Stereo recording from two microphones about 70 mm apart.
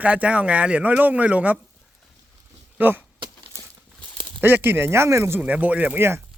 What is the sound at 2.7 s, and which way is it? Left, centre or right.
Speech, right.